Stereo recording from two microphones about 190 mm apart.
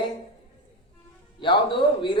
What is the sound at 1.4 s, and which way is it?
Speech, 25° left (ahead or behind).